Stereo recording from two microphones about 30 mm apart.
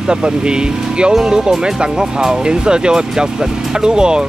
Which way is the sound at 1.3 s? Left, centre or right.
Right.